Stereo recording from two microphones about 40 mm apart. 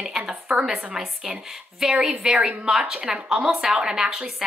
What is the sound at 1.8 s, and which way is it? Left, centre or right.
A woman's voice, centre.